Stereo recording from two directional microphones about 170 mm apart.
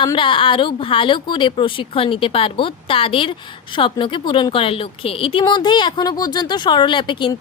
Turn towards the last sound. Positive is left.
turn(degrees=30)  # may be behind; listen again after turning